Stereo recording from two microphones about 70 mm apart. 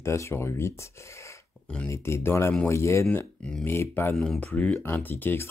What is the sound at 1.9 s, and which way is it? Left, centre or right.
Speech, left.